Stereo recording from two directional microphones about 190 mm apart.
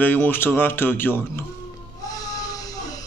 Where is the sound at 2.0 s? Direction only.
20° left (ahead or behind).